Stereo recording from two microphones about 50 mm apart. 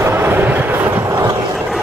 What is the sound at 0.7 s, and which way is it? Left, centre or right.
Vehicle, right.